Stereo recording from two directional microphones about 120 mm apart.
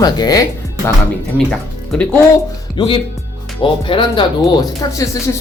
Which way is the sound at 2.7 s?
45° left (ahead or behind).